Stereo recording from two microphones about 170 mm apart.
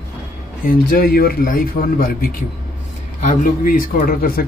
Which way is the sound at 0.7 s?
60° left (ahead or behind).